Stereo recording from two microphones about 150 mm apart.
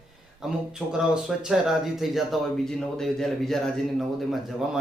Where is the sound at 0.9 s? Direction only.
5° right (ahead or behind).